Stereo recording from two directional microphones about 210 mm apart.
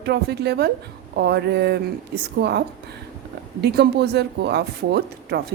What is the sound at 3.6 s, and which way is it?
A woman's voice, 50° right (ahead or behind).